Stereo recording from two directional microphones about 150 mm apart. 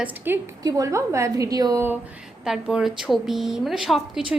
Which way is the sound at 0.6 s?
20° right (ahead or behind).